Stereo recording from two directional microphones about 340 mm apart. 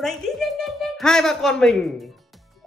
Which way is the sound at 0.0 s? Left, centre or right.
Centre.